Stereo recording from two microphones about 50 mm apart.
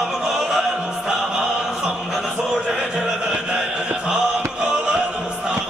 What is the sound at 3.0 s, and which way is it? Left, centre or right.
Chant, centre.